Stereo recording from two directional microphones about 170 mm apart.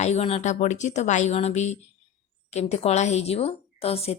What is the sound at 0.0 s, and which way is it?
Speech, 40° left (ahead or behind).